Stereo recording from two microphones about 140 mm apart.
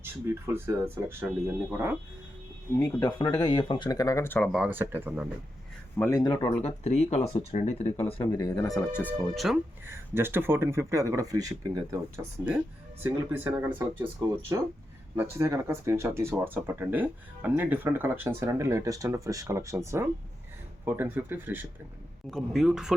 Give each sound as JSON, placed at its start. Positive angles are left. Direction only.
{"t": 0.0, "sound": "speech", "side_deg": -15}
{"t": 2.7, "sound": "speech", "side_deg": 25}
{"t": 4.5, "sound": "speech", "side_deg": -5}
{"t": 4.8, "sound": "speech", "side_deg": -15}
{"t": 6.0, "sound": "speech", "side_deg": 25}
{"t": 6.4, "sound": "speech", "side_deg": 50}
{"t": 8.2, "sound": "speech", "side_deg": 30}
{"t": 9.1, "sound": "speech", "side_deg": 0}
{"t": 9.8, "sound": "speech", "side_deg": -15}
{"t": 13.0, "sound": "speech", "side_deg": -15}
{"t": 22.3, "sound": "speech", "side_deg": 0}